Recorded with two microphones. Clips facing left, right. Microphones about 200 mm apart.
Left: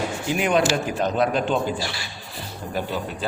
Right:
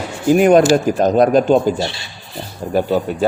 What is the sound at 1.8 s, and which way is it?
Speech, 25° right (ahead or behind).